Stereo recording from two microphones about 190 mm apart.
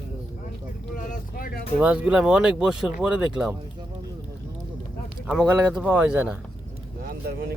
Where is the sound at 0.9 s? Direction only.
45° left (ahead or behind).